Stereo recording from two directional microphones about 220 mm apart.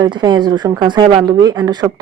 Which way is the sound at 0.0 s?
20° right (ahead or behind).